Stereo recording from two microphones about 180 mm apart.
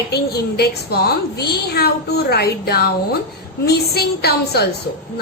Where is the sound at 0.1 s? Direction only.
60° left (ahead or behind).